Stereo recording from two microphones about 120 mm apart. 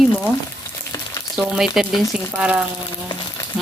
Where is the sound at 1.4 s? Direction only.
5° right (ahead or behind).